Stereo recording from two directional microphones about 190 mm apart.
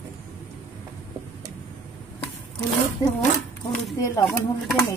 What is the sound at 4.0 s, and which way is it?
Speech, 15° left (ahead or behind).